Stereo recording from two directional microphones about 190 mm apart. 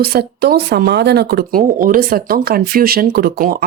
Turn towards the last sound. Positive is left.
turn(degrees=-50)  # may be behind; listen again after turning